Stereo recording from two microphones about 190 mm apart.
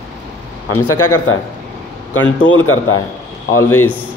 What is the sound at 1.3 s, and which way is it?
A man's voice, 90° left.